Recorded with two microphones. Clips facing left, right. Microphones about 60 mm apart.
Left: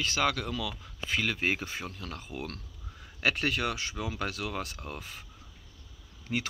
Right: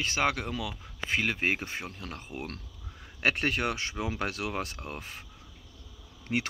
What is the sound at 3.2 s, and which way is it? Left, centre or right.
Speech, right.